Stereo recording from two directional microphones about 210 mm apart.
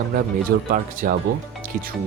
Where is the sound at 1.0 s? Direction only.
40° right (ahead or behind).